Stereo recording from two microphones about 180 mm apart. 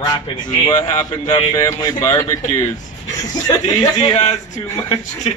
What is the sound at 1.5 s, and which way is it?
Speech, 15° left (ahead or behind).